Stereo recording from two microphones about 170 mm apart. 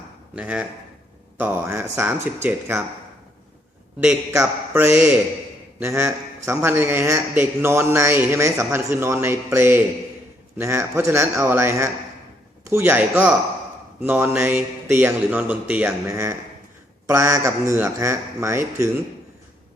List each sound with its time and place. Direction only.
0.3 s a man's voice: 5° right (ahead or behind)
4.3 s a man's voice: 15° right (ahead or behind)